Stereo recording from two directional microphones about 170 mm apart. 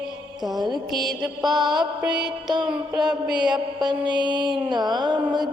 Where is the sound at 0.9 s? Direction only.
Centre (ahead or behind).